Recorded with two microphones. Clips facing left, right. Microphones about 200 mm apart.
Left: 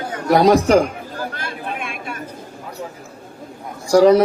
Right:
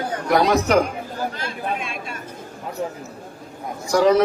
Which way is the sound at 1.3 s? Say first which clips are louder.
Right 1 dB; 55° left (ahead or behind).